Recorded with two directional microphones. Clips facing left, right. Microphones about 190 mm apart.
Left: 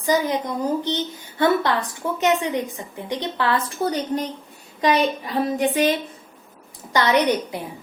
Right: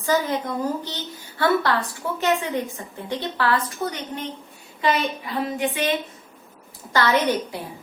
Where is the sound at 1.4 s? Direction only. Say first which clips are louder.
Left 1 dB; 20° left (ahead or behind).